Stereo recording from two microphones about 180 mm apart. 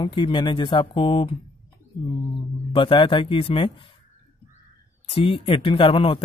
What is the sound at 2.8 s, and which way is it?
Speech, 30° left (ahead or behind).